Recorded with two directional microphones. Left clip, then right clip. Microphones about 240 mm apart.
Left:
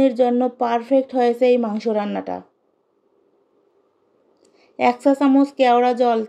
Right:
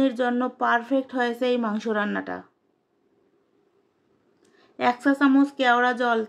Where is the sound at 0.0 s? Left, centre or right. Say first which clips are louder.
Left 7 dB; centre.